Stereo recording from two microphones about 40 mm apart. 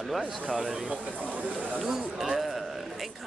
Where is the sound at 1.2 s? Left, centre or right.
Right.